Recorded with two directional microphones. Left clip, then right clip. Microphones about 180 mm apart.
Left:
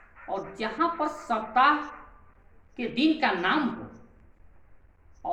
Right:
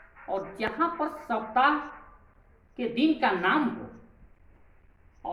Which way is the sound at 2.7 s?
10° right (ahead or behind).